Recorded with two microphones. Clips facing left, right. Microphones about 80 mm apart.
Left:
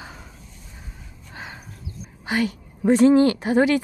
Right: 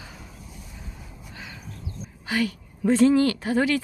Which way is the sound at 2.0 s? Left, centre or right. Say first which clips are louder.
Left 2 dB; left.